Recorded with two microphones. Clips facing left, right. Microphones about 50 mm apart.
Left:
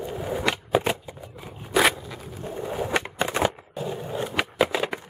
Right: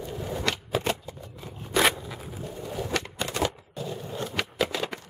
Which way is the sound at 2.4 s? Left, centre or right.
Left.